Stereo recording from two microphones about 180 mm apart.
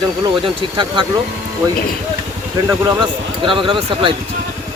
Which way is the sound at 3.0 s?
30° right (ahead or behind).